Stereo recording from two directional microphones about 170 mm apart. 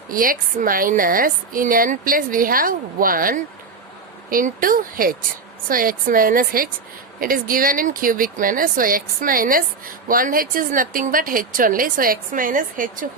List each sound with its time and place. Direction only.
0.1 s speech: 55° right (ahead or behind)